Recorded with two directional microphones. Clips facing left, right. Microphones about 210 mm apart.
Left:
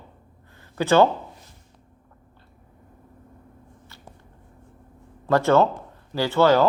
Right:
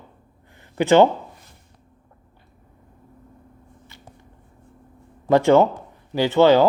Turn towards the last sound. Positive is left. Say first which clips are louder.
# right 3 dB
turn(degrees=-15)  # may be behind; listen again after turning